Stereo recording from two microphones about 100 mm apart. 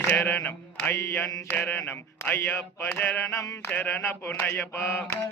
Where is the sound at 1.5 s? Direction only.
20° left (ahead or behind).